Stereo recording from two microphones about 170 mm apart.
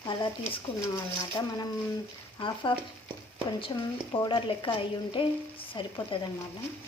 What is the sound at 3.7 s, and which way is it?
Speech, 25° left (ahead or behind).